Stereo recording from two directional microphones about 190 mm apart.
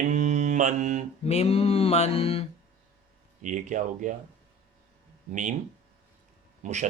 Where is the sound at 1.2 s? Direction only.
35° left (ahead or behind).